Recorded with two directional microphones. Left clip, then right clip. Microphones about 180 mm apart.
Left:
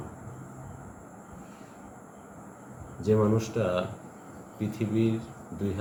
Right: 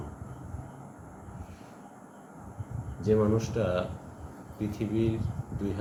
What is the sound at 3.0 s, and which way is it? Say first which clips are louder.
A man's voice: left 1 dB; 10° left (ahead or behind).